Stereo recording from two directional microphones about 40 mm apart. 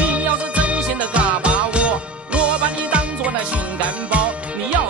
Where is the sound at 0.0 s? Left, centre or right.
Right.